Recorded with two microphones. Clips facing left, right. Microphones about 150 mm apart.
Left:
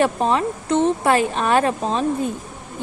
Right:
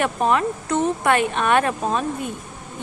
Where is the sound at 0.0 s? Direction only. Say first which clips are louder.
Left 1 dB; 30° left (ahead or behind).